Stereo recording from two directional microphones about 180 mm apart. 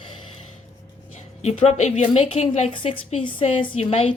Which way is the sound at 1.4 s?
40° left (ahead or behind).